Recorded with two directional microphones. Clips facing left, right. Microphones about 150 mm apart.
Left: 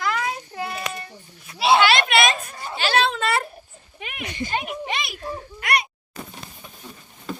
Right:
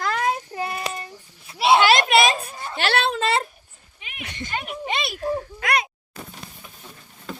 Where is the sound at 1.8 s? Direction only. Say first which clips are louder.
Right 2 dB; 40° right (ahead or behind).